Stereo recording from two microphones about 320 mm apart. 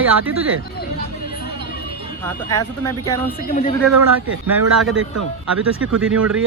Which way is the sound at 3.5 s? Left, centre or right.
Left.